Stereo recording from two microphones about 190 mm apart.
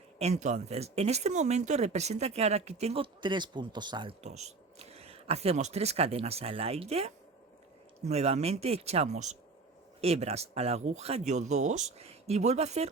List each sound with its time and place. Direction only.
0.2 s speech: 35° right (ahead or behind)
4.2 s speech: 35° right (ahead or behind)